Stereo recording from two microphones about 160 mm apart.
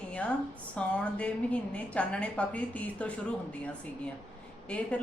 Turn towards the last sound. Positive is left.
turn(degrees=10)  # may be behind; listen again after turning